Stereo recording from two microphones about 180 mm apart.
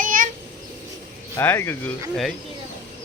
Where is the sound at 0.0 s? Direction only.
50° right (ahead or behind).